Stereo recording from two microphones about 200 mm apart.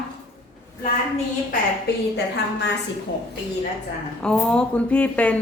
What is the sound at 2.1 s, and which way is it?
Speech, 60° left (ahead or behind).